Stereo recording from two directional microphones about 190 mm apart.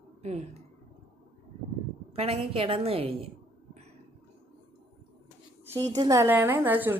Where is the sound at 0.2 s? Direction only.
35° right (ahead or behind).